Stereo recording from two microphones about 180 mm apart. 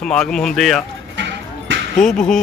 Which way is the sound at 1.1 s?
85° right.